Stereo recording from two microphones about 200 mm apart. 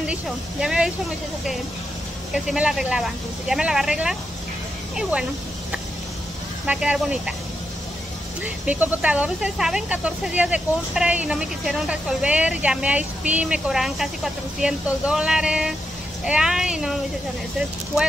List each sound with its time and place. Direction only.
0.0 s speech: 5° right (ahead or behind)
2.3 s speech: 5° right (ahead or behind)
6.6 s speech: 5° right (ahead or behind)
8.6 s speech: 10° right (ahead or behind)